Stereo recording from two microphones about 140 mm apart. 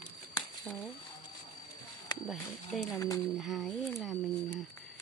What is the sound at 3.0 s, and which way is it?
Speech, 20° left (ahead or behind).